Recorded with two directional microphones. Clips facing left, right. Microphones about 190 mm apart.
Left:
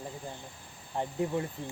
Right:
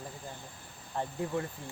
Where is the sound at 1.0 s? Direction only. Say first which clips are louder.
Left 3 dB; 20° left (ahead or behind).